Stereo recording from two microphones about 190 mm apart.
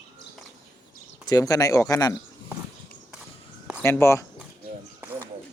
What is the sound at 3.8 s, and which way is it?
Speech, 15° left (ahead or behind).